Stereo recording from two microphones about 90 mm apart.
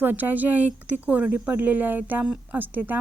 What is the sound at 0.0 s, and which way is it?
A woman's voice, 20° right (ahead or behind).